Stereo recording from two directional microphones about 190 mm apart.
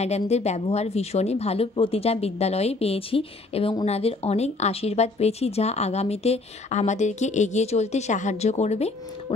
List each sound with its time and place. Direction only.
0.0 s speech: 35° left (ahead or behind)